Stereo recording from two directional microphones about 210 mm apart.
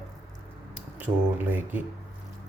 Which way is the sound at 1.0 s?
10° right (ahead or behind).